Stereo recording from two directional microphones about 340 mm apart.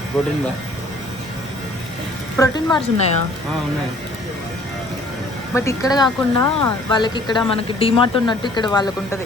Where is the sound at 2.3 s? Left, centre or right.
Centre.